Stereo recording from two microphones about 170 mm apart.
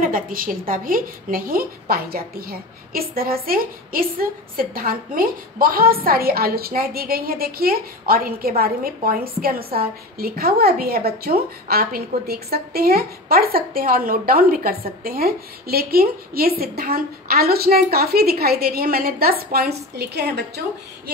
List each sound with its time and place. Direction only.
0.0 s a woman's voice: 55° right (ahead or behind)
20.0 s a woman's voice: 75° right (ahead or behind)